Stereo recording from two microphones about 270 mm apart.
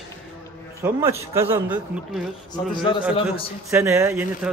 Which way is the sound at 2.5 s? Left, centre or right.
Centre.